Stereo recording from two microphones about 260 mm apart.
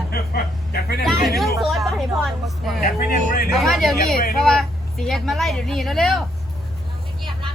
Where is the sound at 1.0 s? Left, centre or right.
Centre.